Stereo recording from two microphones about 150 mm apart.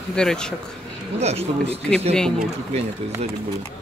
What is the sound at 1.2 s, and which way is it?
Speech, 45° right (ahead or behind).